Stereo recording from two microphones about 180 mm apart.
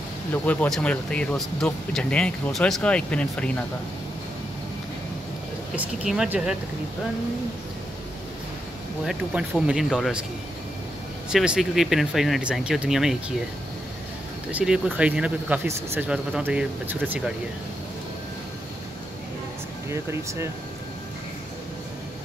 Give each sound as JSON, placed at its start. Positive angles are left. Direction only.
{"t": 0.3, "sound": "speech", "side_deg": 10}
{"t": 5.8, "sound": "speech", "side_deg": -5}
{"t": 9.0, "sound": "speech", "side_deg": -5}
{"t": 11.2, "sound": "speech", "side_deg": -5}
{"t": 14.5, "sound": "speech", "side_deg": -5}
{"t": 19.9, "sound": "speech", "side_deg": -15}